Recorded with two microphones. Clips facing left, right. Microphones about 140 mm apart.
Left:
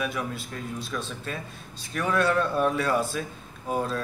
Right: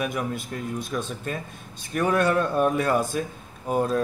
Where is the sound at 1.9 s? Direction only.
45° right (ahead or behind).